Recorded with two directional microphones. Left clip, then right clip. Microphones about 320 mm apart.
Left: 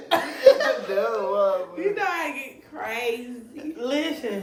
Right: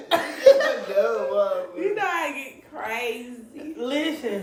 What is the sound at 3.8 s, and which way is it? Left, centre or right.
Speech, centre.